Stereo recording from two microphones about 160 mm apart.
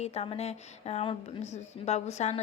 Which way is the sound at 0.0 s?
40° left (ahead or behind).